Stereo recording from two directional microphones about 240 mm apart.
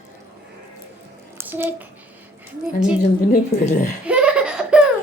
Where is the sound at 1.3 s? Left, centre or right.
Centre.